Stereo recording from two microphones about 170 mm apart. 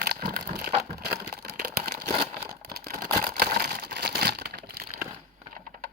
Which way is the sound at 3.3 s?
60° right (ahead or behind).